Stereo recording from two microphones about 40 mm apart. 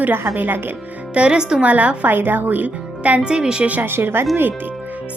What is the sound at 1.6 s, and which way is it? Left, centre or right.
Speech, right.